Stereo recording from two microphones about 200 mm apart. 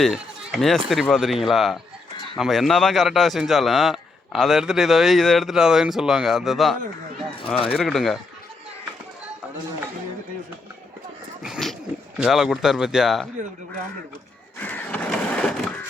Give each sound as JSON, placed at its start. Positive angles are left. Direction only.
{"t": 0.0, "sound": "a man's voice", "side_deg": 0}
{"t": 7.4, "sound": "speech", "side_deg": 30}
{"t": 7.7, "sound": "a man's voice", "side_deg": 0}
{"t": 11.4, "sound": "a sound", "side_deg": -5}
{"t": 12.2, "sound": "a man's voice", "side_deg": 0}
{"t": 14.6, "sound": "a sound", "side_deg": 10}